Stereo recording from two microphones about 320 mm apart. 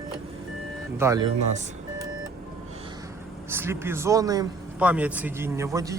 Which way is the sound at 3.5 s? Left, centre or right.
Centre.